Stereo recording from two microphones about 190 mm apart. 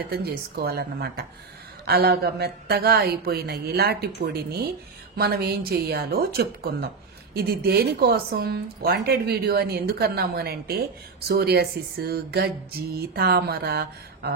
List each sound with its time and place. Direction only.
0.2 s a woman's voice: 55° right (ahead or behind)